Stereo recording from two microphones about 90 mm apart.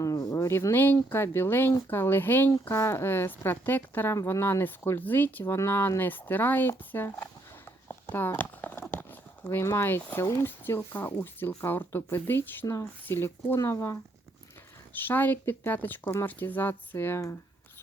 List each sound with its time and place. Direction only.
0.0 s speech: 40° left (ahead or behind)
8.1 s a sound: 20° left (ahead or behind)
10.4 s speech: 25° left (ahead or behind)
12.6 s speech: 45° left (ahead or behind)
13.1 s speech: 25° left (ahead or behind)
14.9 s speech: 20° left (ahead or behind)